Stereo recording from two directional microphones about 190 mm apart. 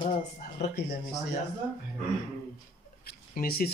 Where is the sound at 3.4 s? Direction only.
55° left (ahead or behind).